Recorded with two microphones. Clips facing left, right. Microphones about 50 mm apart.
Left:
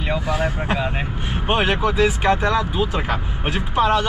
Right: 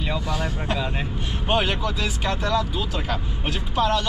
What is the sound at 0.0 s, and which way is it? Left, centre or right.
Speech, left.